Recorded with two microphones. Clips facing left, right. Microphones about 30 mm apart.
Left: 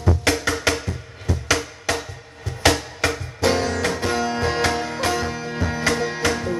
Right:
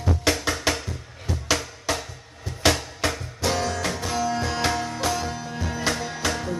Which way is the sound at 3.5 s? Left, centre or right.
Left.